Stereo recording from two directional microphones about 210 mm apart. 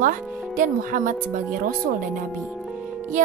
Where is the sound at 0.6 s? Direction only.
40° right (ahead or behind).